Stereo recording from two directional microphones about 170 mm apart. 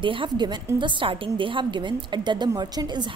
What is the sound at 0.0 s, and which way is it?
A woman's voice, 30° right (ahead or behind).